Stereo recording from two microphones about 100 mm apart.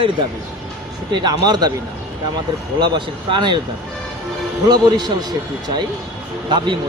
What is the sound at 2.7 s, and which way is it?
Speech, 50° right (ahead or behind).